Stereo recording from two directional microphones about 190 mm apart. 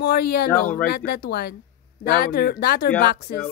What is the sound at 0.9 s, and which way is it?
Speech, 55° left (ahead or behind).